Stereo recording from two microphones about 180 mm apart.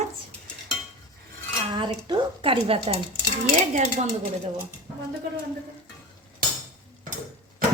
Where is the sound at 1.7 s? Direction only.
25° right (ahead or behind).